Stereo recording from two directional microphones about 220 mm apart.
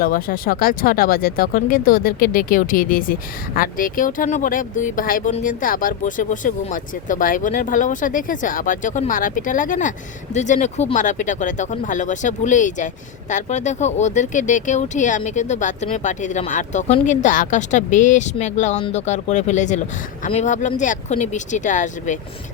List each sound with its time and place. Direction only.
0.0 s speech: 40° left (ahead or behind)